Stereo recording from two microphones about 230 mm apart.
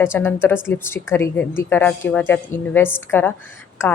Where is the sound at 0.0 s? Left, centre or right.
Centre.